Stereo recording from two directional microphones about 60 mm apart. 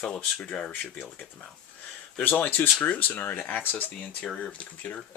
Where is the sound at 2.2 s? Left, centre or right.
Left.